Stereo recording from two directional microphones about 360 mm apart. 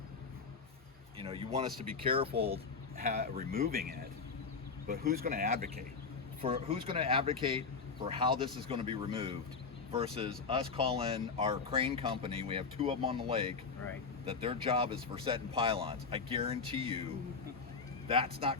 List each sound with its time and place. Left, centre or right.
1.2 s speech: centre
18.1 s speech: centre